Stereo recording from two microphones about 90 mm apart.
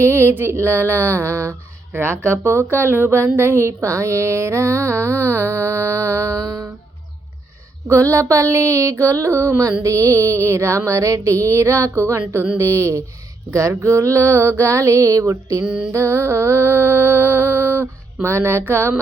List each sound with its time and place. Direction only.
0.0 s a woman's voice: 30° right (ahead or behind)
7.9 s a sound: 35° right (ahead or behind)
15.6 s music: 10° right (ahead or behind)
15.9 s a woman's voice: 30° right (ahead or behind)